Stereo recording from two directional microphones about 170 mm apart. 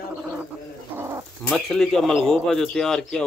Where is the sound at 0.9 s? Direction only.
15° right (ahead or behind).